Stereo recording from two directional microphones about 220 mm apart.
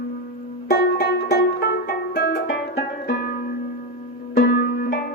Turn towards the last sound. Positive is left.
turn(degrees=40)  # may be behind; listen again after turning